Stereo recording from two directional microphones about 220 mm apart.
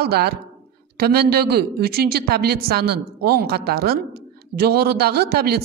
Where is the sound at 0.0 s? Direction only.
45° right (ahead or behind).